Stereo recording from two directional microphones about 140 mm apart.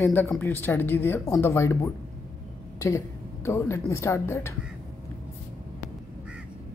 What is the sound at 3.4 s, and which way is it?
A woman's voice, 20° left (ahead or behind).